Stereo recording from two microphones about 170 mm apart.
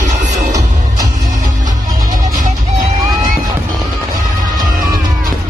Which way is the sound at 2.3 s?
55° right (ahead or behind).